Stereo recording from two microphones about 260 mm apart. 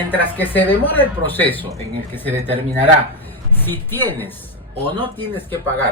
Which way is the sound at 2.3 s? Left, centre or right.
Right.